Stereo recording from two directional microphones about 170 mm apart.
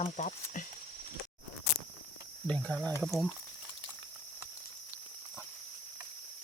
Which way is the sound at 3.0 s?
Centre (ahead or behind).